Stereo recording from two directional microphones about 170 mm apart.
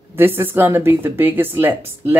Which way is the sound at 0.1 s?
15° right (ahead or behind).